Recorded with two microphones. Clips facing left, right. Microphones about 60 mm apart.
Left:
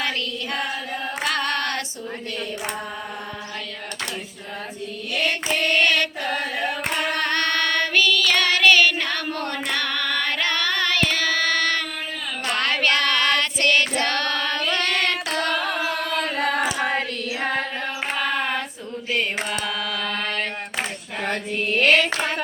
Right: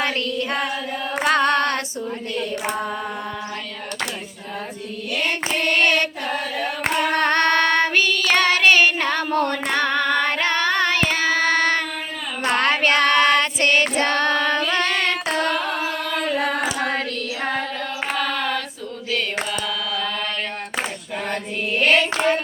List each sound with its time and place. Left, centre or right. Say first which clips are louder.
1.2 s singing: right 7 dB; right
5.8 s carnatic music: right 3 dB; right
7.1 s child singing: right 6 dB; right; by 15.5 s centre
16.2 s carnatic music: right 2 dB; centre
16.8 s child singing: even; centre
18.3 s female singing: right 1 dB; left
19.5 s mantra: right 1 dB; left